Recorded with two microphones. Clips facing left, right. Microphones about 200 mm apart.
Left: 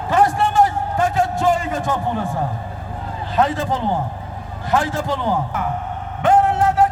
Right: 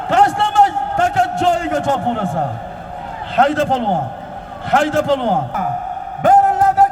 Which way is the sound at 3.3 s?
75° right (ahead or behind).